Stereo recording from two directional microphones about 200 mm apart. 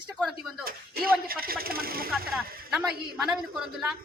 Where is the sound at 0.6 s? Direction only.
50° right (ahead or behind).